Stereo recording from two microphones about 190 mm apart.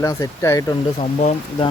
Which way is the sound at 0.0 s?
15° left (ahead or behind).